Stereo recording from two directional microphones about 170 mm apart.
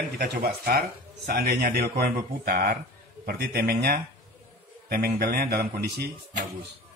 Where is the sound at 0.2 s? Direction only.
60° right (ahead or behind).